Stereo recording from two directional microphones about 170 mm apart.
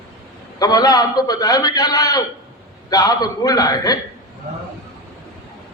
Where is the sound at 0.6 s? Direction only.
20° left (ahead or behind).